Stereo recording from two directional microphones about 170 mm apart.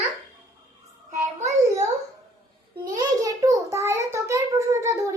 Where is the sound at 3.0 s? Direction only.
20° right (ahead or behind).